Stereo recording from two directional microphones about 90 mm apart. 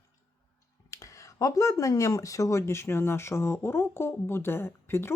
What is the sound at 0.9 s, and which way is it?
Speech, 35° left (ahead or behind).